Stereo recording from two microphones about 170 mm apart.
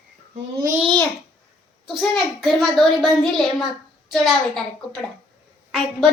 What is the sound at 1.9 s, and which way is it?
A child's voice, centre (ahead or behind).